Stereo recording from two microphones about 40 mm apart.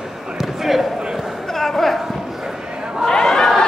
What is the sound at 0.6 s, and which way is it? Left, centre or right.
Speech, centre.